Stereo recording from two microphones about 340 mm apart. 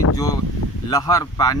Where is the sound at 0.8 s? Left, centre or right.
Centre.